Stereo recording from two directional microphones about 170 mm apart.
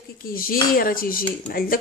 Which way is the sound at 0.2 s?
60° left (ahead or behind).